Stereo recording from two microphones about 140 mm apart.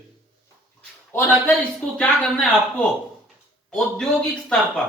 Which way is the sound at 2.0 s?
Centre (ahead or behind).